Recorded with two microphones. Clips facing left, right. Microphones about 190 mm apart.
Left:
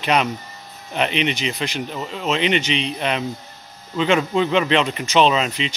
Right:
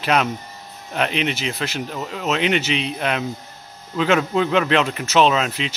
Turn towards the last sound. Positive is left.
turn(degrees=-5)  # may be behind; listen again after turning